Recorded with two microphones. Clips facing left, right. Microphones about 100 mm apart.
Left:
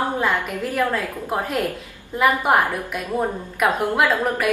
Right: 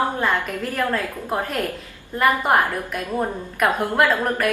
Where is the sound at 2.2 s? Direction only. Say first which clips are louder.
Even; 5° left (ahead or behind).